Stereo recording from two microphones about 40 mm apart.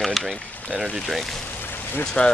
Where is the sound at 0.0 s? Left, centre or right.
Centre.